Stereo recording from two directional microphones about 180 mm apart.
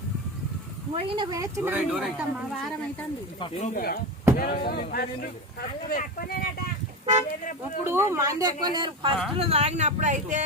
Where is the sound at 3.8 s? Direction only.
55° left (ahead or behind).